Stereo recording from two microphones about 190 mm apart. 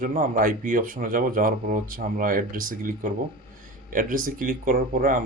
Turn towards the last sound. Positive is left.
turn(degrees=-50)  # may be behind; listen again after turning